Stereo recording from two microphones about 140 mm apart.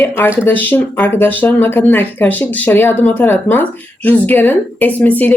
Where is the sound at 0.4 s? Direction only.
15° left (ahead or behind).